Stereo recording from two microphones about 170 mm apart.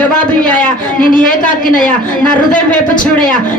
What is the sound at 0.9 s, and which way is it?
Speech, 50° left (ahead or behind).